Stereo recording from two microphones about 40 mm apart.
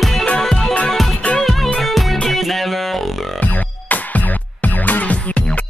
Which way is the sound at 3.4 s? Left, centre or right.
Left.